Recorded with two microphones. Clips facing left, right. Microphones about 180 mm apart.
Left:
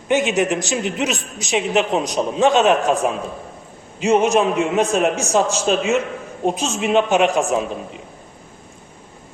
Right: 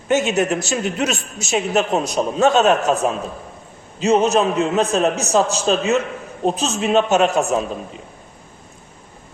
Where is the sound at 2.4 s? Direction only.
40° right (ahead or behind).